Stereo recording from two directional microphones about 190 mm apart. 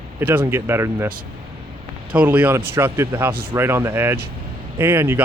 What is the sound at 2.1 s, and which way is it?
Speech, 10° right (ahead or behind).